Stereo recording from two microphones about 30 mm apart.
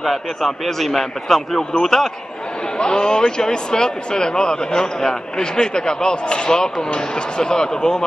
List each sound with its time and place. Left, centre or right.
0.0 s a man's voice: centre
2.8 s speech: left